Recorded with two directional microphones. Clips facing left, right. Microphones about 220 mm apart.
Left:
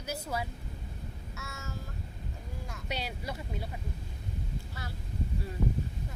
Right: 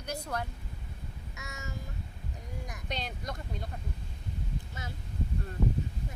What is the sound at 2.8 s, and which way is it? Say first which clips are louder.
Speech: left 1 dB; 5° left (ahead or behind).